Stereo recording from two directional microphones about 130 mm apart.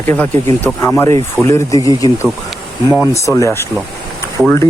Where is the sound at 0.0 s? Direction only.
15° left (ahead or behind).